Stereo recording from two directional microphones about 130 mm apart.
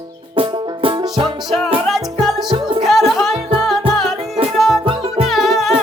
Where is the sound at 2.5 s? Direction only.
40° right (ahead or behind).